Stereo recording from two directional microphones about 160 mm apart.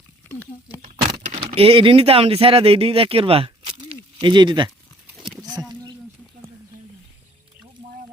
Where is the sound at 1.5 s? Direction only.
35° right (ahead or behind).